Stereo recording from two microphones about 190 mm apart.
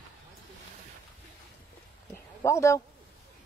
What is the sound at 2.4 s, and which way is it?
Speech, 15° left (ahead or behind).